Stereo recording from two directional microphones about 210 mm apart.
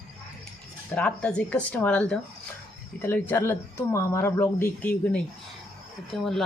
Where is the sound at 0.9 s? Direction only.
5° left (ahead or behind).